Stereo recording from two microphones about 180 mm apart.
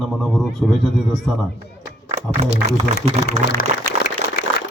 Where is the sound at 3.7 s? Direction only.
40° right (ahead or behind).